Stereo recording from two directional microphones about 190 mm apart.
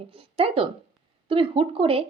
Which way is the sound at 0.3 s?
30° right (ahead or behind).